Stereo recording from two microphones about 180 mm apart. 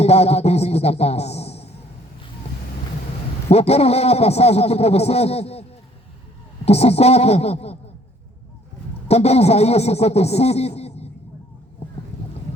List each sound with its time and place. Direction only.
0.0 s a sound: 35° left (ahead or behind)
3.5 s a man's voice: 35° left (ahead or behind)
6.7 s a man's voice: 35° left (ahead or behind)
9.0 s a man's voice: 35° left (ahead or behind)